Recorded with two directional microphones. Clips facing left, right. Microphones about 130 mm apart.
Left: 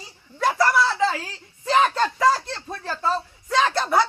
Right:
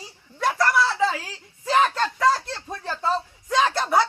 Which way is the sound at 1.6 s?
Centre (ahead or behind).